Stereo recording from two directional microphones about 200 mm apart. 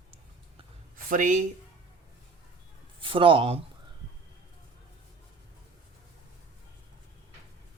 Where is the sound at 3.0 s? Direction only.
25° right (ahead or behind).